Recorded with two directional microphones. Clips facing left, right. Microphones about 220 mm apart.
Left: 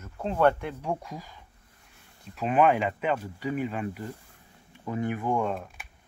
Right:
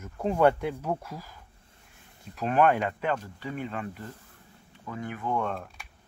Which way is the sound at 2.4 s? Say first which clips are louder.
Left 1 dB; 5° left (ahead or behind).